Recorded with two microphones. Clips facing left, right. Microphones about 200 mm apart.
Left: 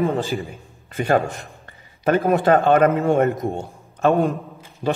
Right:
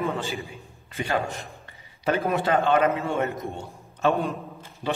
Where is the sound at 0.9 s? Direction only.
50° left (ahead or behind).